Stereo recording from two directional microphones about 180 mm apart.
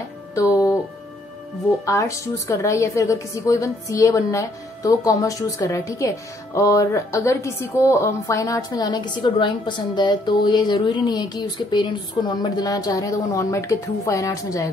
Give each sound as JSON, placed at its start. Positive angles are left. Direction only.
{"t": 0.3, "sound": "music", "side_deg": 15}
{"t": 1.9, "sound": "a woman's voice", "side_deg": 15}